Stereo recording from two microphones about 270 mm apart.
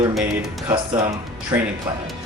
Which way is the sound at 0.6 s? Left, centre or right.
Centre.